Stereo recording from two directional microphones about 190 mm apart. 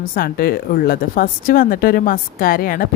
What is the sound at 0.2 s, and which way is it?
Speech, 55° left (ahead or behind).